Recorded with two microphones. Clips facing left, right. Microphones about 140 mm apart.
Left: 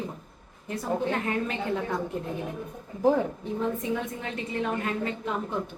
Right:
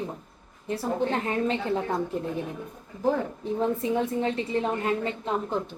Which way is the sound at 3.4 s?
35° right (ahead or behind).